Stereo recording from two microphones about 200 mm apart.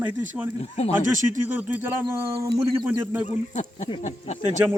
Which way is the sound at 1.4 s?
10° right (ahead or behind).